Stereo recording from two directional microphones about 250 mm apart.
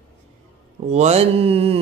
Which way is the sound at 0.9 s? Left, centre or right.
Right.